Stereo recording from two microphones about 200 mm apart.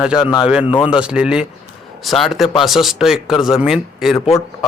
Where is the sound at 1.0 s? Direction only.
5° right (ahead or behind).